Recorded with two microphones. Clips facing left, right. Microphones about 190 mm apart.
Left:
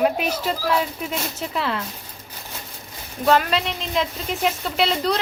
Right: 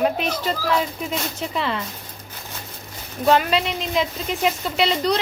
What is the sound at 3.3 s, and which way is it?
Speech, centre (ahead or behind).